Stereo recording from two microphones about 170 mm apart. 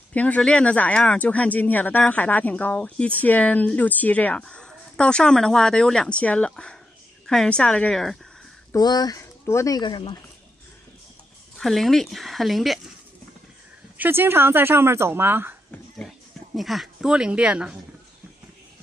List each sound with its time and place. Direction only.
0.1 s speech: 10° left (ahead or behind)
8.7 s speech: 25° left (ahead or behind)
11.5 s speech: centre (ahead or behind)
13.9 s speech: 10° right (ahead or behind)
16.0 s speech: centre (ahead or behind)